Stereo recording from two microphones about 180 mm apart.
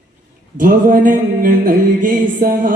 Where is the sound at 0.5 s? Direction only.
50° right (ahead or behind).